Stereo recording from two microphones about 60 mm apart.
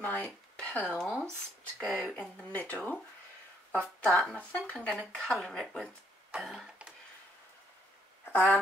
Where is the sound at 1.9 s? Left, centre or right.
Centre.